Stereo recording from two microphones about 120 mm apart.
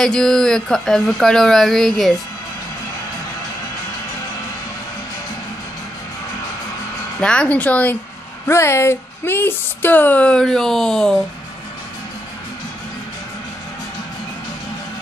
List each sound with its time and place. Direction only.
0.0 s speech: 5° left (ahead or behind)
7.2 s speech: 10° left (ahead or behind)